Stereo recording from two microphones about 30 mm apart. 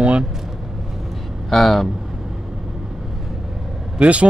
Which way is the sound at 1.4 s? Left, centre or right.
Centre.